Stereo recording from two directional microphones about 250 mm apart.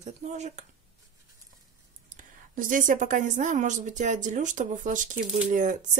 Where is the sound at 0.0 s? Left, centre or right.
Right.